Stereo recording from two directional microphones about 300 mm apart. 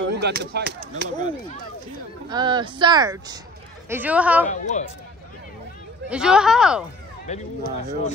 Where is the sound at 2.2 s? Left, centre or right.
Centre.